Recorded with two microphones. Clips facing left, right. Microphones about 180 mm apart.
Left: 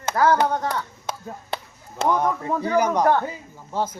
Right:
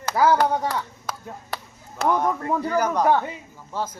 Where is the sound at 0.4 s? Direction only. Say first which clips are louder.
Right 1 dB; 10° right (ahead or behind).